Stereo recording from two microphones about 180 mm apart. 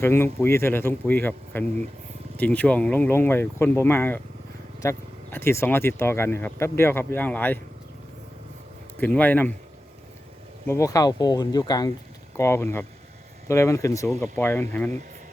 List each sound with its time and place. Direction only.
0.0 s speech: 15° left (ahead or behind)
9.0 s speech: 10° left (ahead or behind)
10.7 s speech: 20° left (ahead or behind)